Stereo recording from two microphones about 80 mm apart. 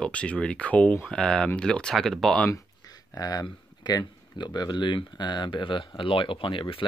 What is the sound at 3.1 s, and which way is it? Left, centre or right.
Speech, left.